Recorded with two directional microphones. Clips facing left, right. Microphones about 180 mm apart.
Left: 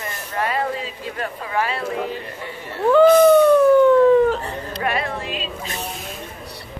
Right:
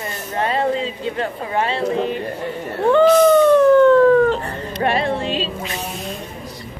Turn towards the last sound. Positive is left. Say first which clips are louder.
# right 6 dB
turn(degrees=-30)  # may be behind; listen again after turning